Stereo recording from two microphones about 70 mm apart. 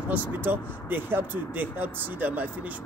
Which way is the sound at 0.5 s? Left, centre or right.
Right.